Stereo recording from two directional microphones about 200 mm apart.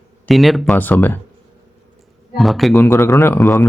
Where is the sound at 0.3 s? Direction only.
Centre (ahead or behind).